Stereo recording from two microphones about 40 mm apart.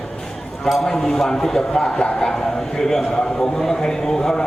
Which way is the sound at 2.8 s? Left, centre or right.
Centre.